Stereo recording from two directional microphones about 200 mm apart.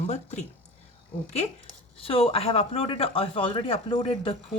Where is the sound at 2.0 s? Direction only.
30° left (ahead or behind).